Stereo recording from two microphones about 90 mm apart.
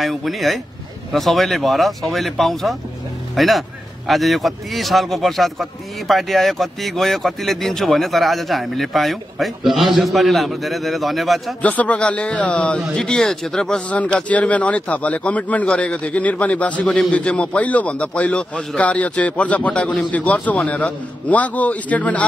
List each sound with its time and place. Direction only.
0.0 s a man's voice: centre (ahead or behind)
11.6 s a man's voice: 15° left (ahead or behind)